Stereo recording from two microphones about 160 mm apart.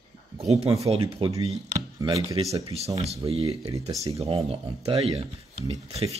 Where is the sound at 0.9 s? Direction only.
35° right (ahead or behind).